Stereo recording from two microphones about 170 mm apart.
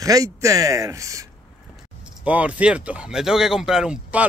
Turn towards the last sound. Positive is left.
turn(degrees=-5)  # may be behind; listen again after turning